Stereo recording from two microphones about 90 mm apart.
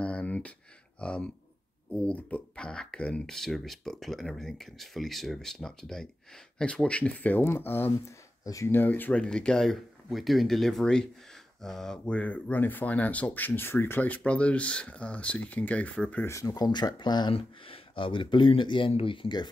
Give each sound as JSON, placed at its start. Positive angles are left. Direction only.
{"t": 0.0, "sound": "a sound", "side_deg": 15}
{"t": 1.0, "sound": "speech", "side_deg": 10}
{"t": 8.5, "sound": "speech", "side_deg": 40}
{"t": 8.7, "sound": "speech", "side_deg": 20}
{"t": 16.3, "sound": "speech", "side_deg": 40}
{"t": 17.3, "sound": "speech", "side_deg": 85}